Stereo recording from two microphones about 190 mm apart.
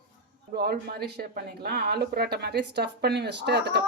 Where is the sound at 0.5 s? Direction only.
55° right (ahead or behind).